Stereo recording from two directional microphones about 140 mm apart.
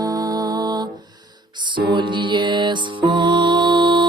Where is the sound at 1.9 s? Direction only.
35° right (ahead or behind).